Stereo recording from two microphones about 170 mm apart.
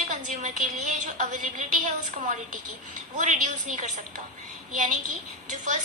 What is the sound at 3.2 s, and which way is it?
Speech, 50° right (ahead or behind).